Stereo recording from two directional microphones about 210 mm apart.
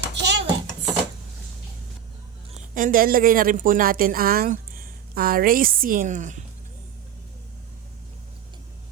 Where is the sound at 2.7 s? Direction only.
40° right (ahead or behind).